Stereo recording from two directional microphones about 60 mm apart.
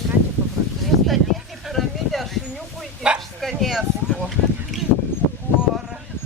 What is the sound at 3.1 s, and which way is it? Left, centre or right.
Bow-wow, centre.